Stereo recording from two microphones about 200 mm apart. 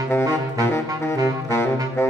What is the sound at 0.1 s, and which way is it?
Saxophone, 10° left (ahead or behind).